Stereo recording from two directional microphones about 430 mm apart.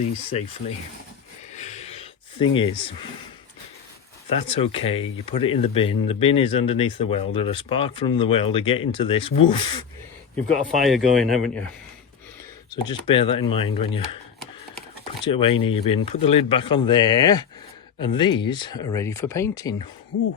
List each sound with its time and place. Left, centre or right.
0.0 s speech: centre
1.5 s a sound: centre
2.6 s speech: centre
4.4 s speech: centre
10.8 s speech: centre
12.7 s speech: centre
15.2 s speech: centre